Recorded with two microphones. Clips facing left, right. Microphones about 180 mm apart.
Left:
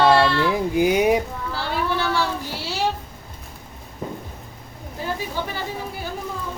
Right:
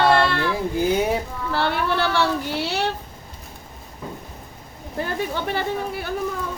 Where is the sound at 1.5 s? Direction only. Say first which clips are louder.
Right 3 dB; 65° right (ahead or behind).